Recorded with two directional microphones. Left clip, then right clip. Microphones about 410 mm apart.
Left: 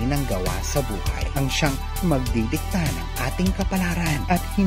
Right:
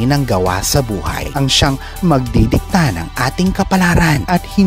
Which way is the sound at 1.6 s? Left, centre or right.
Right.